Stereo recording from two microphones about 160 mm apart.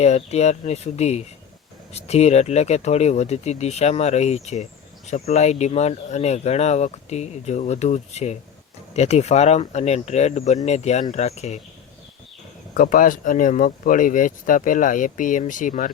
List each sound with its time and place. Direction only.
0.0 s speech: 45° left (ahead or behind)
12.7 s speech: 60° left (ahead or behind)